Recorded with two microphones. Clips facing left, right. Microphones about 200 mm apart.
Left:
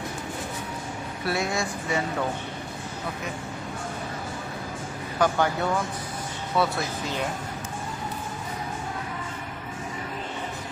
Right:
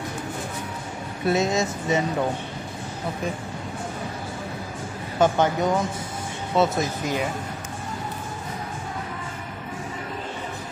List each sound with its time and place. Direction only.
1.2 s speech: 20° right (ahead or behind)
5.2 s speech: 20° right (ahead or behind)